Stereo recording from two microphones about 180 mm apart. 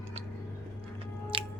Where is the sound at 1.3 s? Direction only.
30° right (ahead or behind).